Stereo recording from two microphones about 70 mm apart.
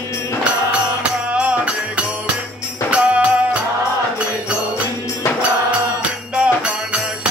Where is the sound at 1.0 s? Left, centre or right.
Centre.